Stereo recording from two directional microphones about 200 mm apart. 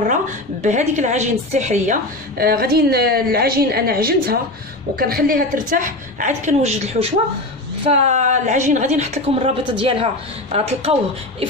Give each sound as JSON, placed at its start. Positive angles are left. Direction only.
{"t": 0.0, "sound": "a woman's voice", "side_deg": -40}